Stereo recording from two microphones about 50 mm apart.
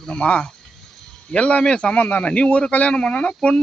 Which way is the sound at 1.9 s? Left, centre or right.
Left.